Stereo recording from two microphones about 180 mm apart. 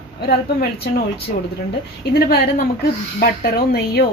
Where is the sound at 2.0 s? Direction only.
60° left (ahead or behind).